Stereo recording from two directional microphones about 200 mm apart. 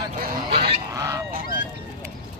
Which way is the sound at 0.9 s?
15° right (ahead or behind).